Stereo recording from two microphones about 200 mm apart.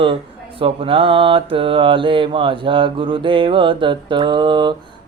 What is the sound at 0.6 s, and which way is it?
Speech, 25° right (ahead or behind).